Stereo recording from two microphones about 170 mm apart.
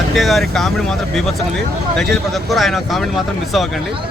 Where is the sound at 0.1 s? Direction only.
Centre (ahead or behind).